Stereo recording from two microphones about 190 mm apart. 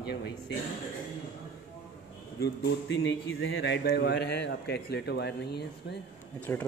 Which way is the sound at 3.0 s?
65° left (ahead or behind).